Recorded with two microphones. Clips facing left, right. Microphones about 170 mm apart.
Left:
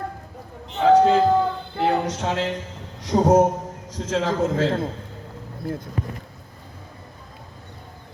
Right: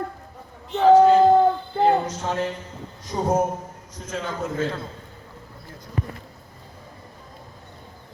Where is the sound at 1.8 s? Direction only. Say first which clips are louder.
Right 1 dB; 75° left (ahead or behind).